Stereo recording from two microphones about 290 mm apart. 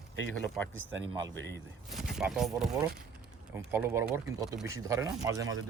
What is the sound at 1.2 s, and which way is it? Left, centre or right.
Speech, right.